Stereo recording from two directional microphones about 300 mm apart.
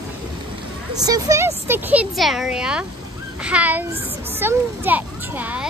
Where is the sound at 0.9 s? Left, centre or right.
Centre.